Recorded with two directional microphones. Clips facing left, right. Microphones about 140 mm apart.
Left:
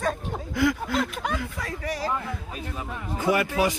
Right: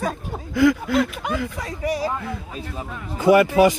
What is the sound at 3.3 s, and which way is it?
Speech, 75° right (ahead or behind).